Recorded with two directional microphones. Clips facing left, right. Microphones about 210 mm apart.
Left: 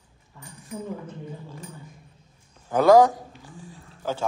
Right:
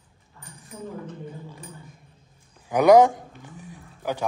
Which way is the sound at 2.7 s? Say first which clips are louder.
Right 1 dB; 15° right (ahead or behind).